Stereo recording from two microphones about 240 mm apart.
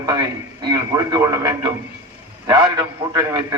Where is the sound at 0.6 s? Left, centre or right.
Centre.